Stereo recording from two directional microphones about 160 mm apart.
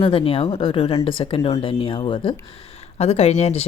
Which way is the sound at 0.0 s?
35° left (ahead or behind).